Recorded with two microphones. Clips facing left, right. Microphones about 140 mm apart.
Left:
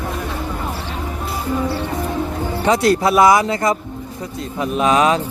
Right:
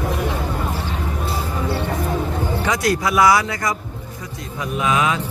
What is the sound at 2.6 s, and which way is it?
Speech, 30° left (ahead or behind).